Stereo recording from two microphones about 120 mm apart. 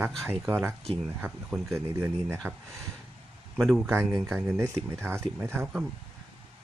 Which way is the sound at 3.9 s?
20° right (ahead or behind).